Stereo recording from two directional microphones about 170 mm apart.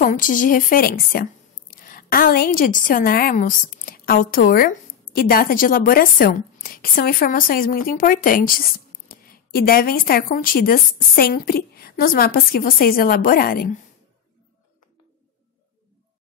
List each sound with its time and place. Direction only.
0.0 s a woman's voice: 50° left (ahead or behind)